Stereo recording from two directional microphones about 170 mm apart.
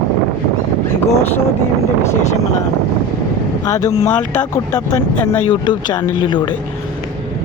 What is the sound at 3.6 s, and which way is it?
Speech, 20° left (ahead or behind).